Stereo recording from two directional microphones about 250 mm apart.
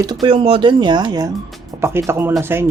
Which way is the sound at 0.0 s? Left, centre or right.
Centre.